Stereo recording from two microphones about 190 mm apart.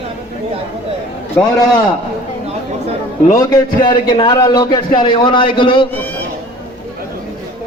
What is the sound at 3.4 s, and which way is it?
A man's voice, 20° left (ahead or behind).